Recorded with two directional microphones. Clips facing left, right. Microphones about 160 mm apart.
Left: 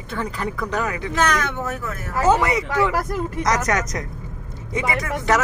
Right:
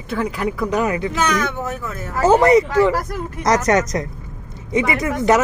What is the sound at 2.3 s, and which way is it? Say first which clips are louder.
Speech: right 6 dB; 40° right (ahead or behind).